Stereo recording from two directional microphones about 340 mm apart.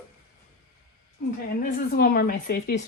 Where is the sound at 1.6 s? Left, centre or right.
Left.